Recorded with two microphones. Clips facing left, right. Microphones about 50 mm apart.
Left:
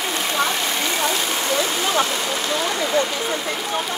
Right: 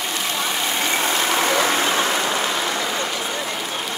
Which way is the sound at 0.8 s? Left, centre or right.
Right.